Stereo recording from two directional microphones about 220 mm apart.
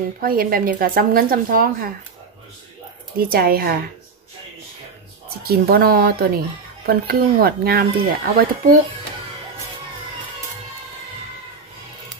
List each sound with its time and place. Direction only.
0.2 s speech: 40° right (ahead or behind)
3.2 s speech: 45° right (ahead or behind)
5.4 s speech: 45° right (ahead or behind)